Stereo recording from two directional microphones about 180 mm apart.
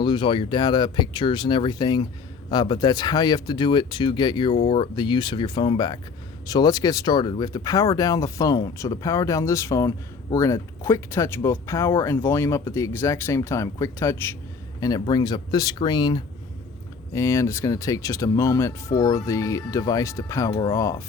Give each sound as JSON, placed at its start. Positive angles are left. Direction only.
{"t": 0.0, "sound": "speech", "side_deg": 25}
{"t": 20.5, "sound": "speech", "side_deg": 25}